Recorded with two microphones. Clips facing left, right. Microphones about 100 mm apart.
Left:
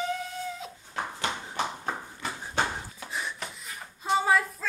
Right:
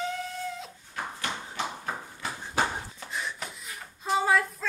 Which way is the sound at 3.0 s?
5° left (ahead or behind).